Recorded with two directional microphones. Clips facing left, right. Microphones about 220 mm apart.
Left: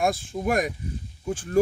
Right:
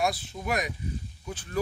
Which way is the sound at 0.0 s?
50° left (ahead or behind).